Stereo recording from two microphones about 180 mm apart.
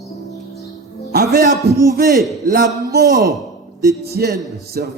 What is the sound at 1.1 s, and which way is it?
Speech, 60° right (ahead or behind).